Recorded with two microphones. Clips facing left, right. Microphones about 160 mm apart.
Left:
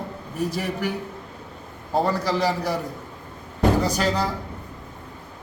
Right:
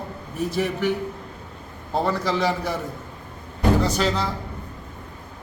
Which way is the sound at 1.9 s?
10° left (ahead or behind).